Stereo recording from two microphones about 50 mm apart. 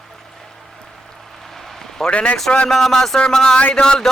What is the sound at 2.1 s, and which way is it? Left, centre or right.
Speech, left.